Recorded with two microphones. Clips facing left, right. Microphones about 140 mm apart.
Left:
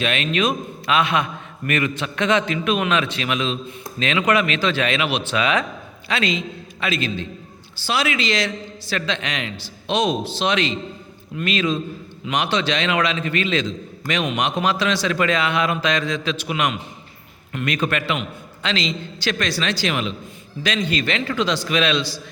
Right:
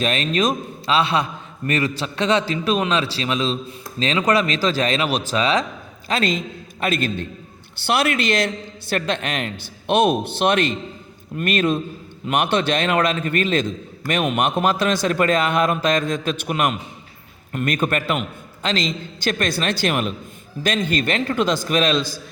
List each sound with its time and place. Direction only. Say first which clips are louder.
0.0 s a man's voice: right 1 dB; 35° right (ahead or behind)